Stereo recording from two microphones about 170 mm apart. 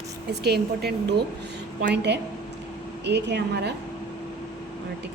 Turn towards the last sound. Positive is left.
turn(degrees=-80)